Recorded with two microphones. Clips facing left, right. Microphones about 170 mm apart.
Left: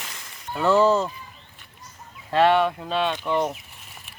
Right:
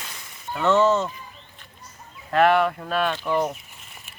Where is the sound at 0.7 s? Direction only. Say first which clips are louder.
Left 1 dB; 35° left (ahead or behind).